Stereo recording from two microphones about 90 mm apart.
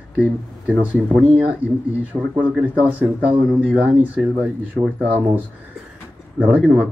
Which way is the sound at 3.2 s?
15° right (ahead or behind).